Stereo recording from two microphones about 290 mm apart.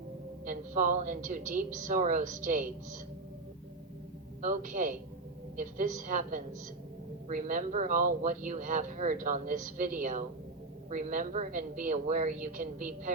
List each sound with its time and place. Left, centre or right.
0.4 s speech: right
4.4 s a man's voice: right